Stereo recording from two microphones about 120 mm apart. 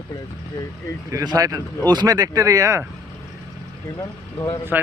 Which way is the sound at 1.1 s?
30° right (ahead or behind).